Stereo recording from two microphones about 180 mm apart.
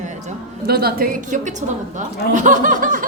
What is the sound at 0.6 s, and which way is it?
A woman's voice, 55° right (ahead or behind).